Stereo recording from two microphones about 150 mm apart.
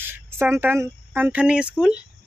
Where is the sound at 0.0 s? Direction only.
15° right (ahead or behind).